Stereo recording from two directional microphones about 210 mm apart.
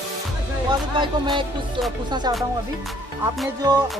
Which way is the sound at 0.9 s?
20° right (ahead or behind).